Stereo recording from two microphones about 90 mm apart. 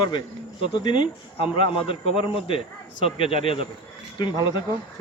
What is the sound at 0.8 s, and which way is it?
A man's voice, 60° left (ahead or behind).